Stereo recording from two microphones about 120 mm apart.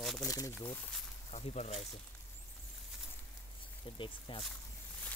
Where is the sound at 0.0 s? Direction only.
Centre (ahead or behind).